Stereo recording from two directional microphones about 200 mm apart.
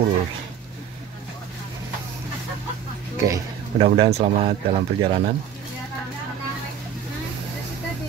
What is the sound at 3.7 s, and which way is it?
Speech, 30° right (ahead or behind).